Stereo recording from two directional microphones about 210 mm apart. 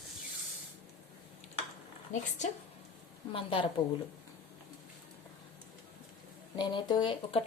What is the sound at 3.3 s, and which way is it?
Speech, 25° left (ahead or behind).